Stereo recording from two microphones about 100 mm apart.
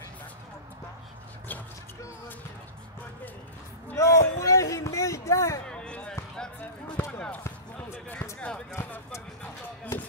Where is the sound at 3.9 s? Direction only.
30° left (ahead or behind).